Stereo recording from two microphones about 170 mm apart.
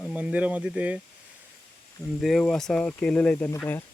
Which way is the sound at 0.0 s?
5° right (ahead or behind).